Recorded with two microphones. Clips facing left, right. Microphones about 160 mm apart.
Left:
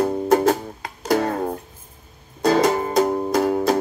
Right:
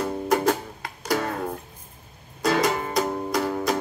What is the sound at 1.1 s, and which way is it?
Music, 40° left (ahead or behind).